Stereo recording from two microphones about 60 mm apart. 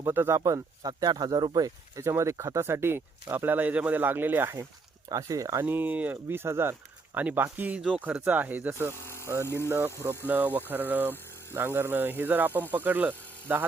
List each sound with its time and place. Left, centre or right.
0.1 s speech: right
0.4 s speech: right
5.0 s speech: right
5.6 s speech: right
6.2 s speech: right
7.2 s speech: right
9.2 s speech: right
9.6 s speech: right
10.2 s speech: right